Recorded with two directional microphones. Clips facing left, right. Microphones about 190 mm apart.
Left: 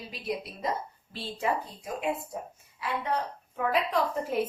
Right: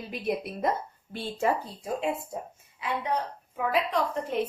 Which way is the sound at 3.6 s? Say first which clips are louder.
Even; centre (ahead or behind).